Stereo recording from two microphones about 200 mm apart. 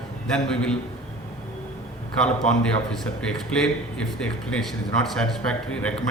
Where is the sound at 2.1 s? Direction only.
5° left (ahead or behind).